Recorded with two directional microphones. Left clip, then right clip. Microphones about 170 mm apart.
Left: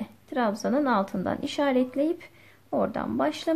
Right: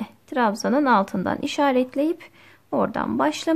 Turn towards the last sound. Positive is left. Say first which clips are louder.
# right 4 dB
turn(degrees=-30)  # may be behind; listen again after turning